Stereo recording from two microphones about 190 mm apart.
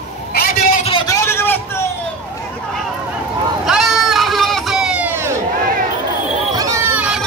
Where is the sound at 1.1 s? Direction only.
15° left (ahead or behind).